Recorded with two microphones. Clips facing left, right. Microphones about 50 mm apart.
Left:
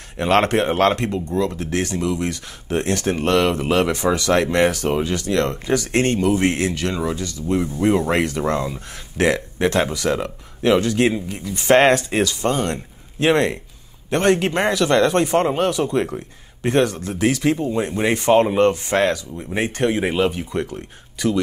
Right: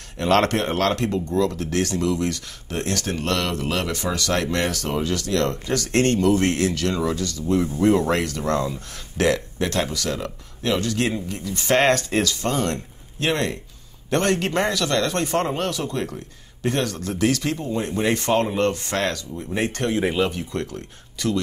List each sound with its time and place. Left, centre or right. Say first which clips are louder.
0.2 s speech: left 2 dB; centre